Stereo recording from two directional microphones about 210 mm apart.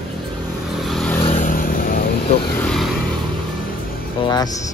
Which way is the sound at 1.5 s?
40° left (ahead or behind).